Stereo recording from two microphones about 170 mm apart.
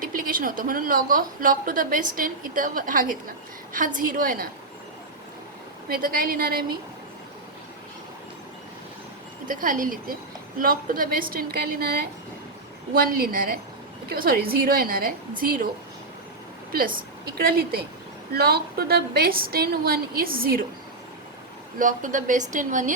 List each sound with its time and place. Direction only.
0.0 s a woman's voice: 55° right (ahead or behind)
5.9 s a woman's voice: 60° right (ahead or behind)
9.5 s a woman's voice: 55° right (ahead or behind)
16.7 s a woman's voice: 55° right (ahead or behind)
21.8 s a woman's voice: 50° right (ahead or behind)